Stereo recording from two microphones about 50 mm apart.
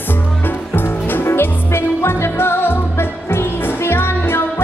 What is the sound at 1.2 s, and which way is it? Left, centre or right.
Music, left.